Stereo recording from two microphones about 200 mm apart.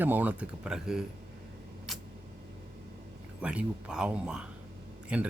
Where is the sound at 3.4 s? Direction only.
5° right (ahead or behind).